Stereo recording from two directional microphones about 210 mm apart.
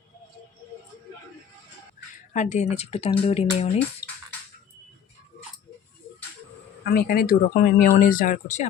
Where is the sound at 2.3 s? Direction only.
35° left (ahead or behind).